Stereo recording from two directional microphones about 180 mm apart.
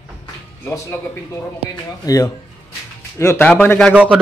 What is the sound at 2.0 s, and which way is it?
A man's voice, 20° left (ahead or behind).